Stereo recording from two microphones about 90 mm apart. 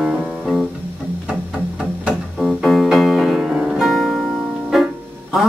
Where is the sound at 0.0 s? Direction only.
10° right (ahead or behind).